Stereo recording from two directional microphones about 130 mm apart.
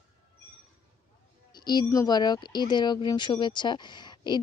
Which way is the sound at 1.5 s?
35° left (ahead or behind).